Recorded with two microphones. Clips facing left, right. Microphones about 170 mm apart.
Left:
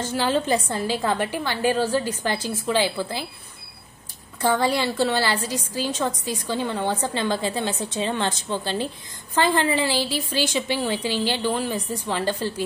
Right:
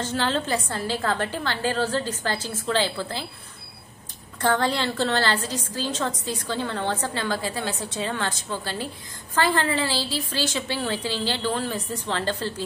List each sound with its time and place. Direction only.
0.0 s a woman's voice: 10° left (ahead or behind)
4.4 s a woman's voice: 10° left (ahead or behind)